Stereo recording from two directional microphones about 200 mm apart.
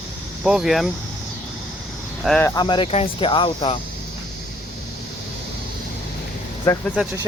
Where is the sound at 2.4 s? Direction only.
20° left (ahead or behind).